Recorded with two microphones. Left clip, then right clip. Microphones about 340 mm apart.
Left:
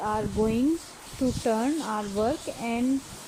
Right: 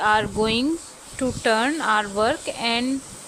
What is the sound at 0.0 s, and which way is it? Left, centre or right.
Speech, right.